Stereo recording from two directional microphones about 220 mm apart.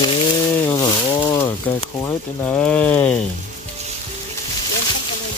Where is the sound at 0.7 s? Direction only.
15° left (ahead or behind).